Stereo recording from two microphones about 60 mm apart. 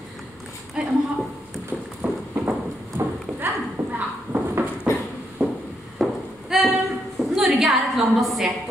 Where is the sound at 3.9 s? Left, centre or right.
Right.